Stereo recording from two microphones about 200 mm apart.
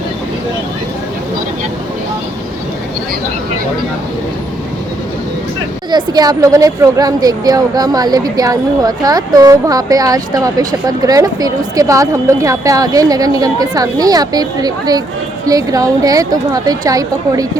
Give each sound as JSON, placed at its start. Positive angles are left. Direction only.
{"t": 5.9, "sound": "a woman's voice", "side_deg": -20}